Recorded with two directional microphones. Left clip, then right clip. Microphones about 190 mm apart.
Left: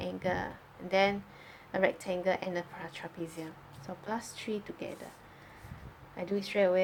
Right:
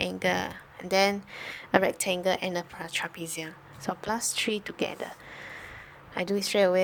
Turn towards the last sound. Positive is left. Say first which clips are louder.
# right 5 dB
turn(degrees=-55)  # may be behind; listen again after turning